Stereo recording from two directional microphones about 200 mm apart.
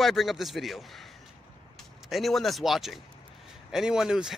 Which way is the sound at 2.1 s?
Centre (ahead or behind).